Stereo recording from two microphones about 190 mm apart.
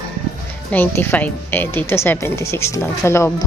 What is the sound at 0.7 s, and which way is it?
A woman's voice, 10° left (ahead or behind).